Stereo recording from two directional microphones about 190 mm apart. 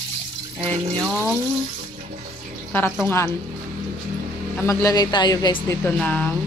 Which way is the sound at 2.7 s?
10° left (ahead or behind).